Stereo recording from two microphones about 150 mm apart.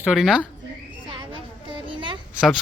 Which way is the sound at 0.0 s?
Centre (ahead or behind).